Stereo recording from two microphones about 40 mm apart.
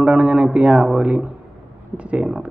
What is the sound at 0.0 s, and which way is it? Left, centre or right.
Speech, right.